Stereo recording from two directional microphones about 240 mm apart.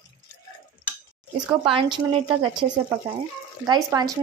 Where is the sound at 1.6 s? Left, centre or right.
Right.